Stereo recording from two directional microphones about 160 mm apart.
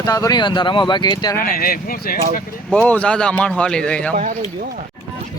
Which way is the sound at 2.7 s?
5° left (ahead or behind).